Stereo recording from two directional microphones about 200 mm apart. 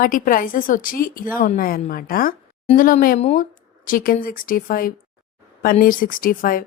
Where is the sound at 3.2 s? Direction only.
30° left (ahead or behind).